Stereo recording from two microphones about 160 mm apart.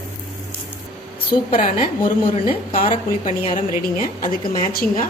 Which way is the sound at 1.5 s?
55° left (ahead or behind).